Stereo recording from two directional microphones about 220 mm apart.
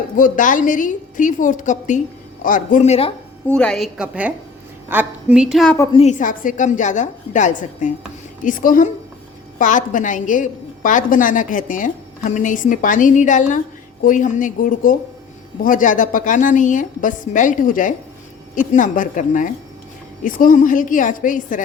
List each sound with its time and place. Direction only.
0.2 s a woman's voice: 35° left (ahead or behind)
3.4 s a woman's voice: 5° left (ahead or behind)
5.7 s a woman's voice: 15° left (ahead or behind)
6.0 s a woman's voice: 35° left (ahead or behind)